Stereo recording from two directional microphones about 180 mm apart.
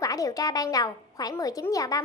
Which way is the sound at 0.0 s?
20° left (ahead or behind).